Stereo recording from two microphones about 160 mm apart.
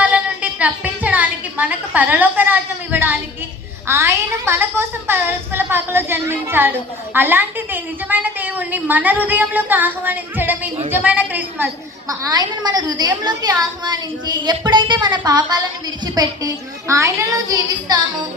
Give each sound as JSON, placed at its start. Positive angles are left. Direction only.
{"t": 0.0, "sound": "a sound", "side_deg": -10}
{"t": 3.8, "sound": "a woman's voice", "side_deg": -15}
{"t": 12.0, "sound": "a woman's voice", "side_deg": -25}
{"t": 16.9, "sound": "a woman's voice", "side_deg": -20}